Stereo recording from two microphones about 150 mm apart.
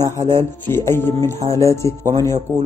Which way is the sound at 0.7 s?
15° left (ahead or behind).